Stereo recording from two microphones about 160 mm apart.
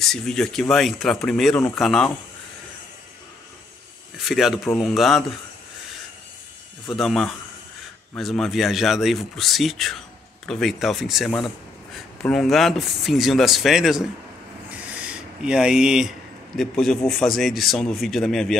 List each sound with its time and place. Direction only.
0.0 s speech: 5° left (ahead or behind)
4.2 s speech: centre (ahead or behind)
6.9 s speech: centre (ahead or behind)